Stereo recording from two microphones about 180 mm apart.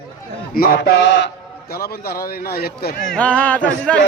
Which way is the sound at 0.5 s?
55° left (ahead or behind).